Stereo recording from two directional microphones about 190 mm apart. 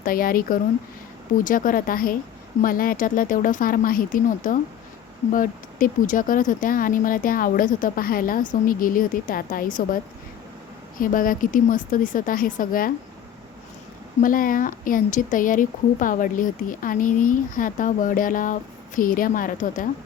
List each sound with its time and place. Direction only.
0.0 s speech: 50° left (ahead or behind)
10.9 s speech: 45° left (ahead or behind)
14.2 s speech: 45° left (ahead or behind)